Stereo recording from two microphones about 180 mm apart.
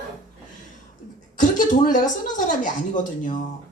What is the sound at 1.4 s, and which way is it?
A woman's voice, 45° left (ahead or behind).